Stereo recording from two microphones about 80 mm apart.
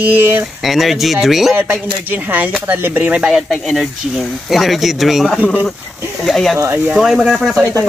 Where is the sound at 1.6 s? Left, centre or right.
Right.